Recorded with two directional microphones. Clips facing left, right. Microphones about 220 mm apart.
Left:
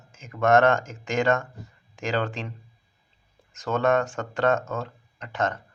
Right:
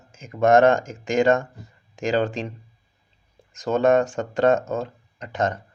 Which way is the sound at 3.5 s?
15° right (ahead or behind).